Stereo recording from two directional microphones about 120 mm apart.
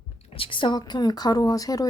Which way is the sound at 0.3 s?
45° left (ahead or behind).